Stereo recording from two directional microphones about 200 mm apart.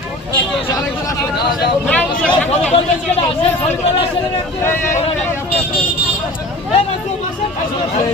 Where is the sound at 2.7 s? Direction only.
30° left (ahead or behind).